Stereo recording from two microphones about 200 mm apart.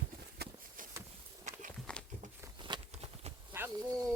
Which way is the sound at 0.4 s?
50° right (ahead or behind).